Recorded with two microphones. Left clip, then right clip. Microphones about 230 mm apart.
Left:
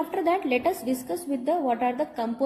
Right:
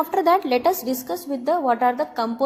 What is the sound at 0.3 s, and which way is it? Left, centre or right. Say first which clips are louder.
Speech: right 5 dB; centre.